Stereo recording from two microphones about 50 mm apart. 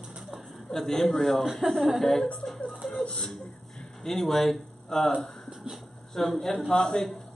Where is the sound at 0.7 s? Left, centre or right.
Centre.